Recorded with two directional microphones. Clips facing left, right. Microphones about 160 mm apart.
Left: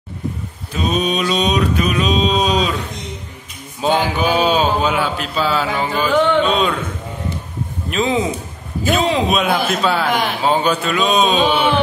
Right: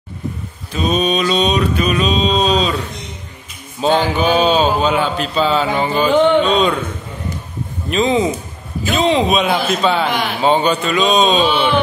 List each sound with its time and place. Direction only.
0.8 s mantra: 10° left (ahead or behind)
3.8 s mantra: 5° left (ahead or behind)
5.0 s speech: 5° left (ahead or behind)
5.9 s music: 20° right (ahead or behind)
6.4 s speech: 5° left (ahead or behind)
7.9 s speech: centre (ahead or behind)